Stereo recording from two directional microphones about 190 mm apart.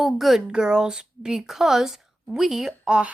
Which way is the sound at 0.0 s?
Centre (ahead or behind).